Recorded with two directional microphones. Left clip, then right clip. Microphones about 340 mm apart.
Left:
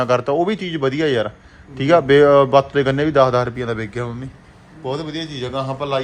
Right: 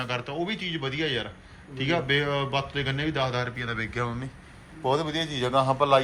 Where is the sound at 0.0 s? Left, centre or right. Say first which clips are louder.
Left 14 dB; left.